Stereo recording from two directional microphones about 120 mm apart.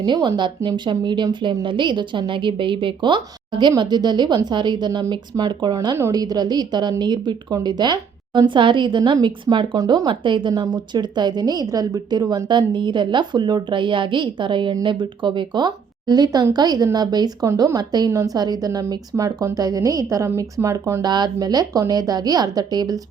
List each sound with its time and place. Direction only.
0.0 s speech: 40° right (ahead or behind)